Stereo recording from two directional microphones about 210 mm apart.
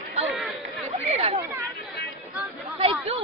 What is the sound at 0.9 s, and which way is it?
Chatter, 30° right (ahead or behind).